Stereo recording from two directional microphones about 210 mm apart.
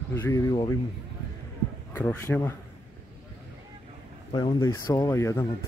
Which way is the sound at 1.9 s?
10° left (ahead or behind).